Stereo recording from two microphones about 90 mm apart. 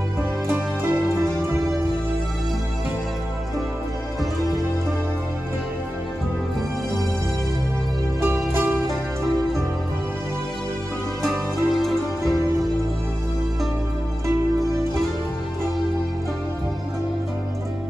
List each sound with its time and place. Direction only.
8.2 s music: 25° right (ahead or behind)
11.2 s music: centre (ahead or behind)